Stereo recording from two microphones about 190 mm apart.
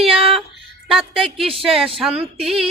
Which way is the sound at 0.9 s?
Centre (ahead or behind).